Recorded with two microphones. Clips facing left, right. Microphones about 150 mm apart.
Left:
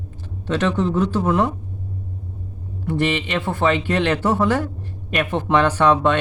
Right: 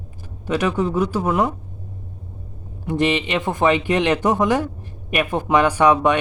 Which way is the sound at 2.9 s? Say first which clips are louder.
Right 2 dB; 15° right (ahead or behind).